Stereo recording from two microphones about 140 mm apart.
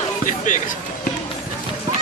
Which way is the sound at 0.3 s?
65° left (ahead or behind).